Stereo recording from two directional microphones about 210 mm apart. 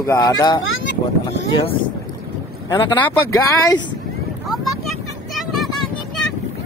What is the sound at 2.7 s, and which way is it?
Speech, 10° left (ahead or behind).